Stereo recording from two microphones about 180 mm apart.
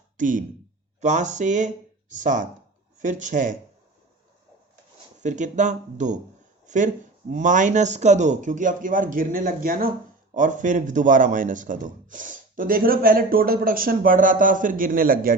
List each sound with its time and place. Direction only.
0.2 s speech: 45° right (ahead or behind)
1.0 s a sound: 40° right (ahead or behind)
2.2 s speech: 45° right (ahead or behind)
5.2 s speech: 40° right (ahead or behind)